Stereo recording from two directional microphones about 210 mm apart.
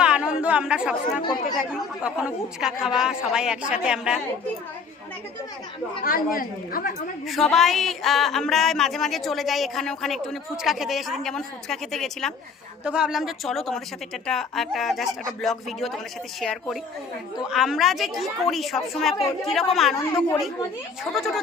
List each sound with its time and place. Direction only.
0.0 s chatter: 5° right (ahead or behind)
1.2 s speech: 20° left (ahead or behind)
1.7 s speech: 5° right (ahead or behind)
6.0 s a woman's voice: 40° left (ahead or behind)
7.3 s speech: centre (ahead or behind)